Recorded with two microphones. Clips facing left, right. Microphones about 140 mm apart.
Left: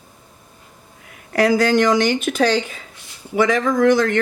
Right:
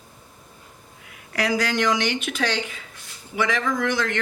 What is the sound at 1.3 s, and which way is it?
Speech, 45° left (ahead or behind).